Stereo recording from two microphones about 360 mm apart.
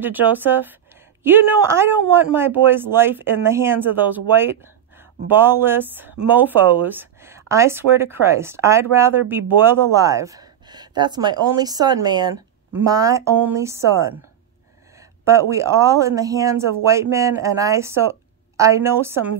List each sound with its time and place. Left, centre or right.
0.0 s speech: centre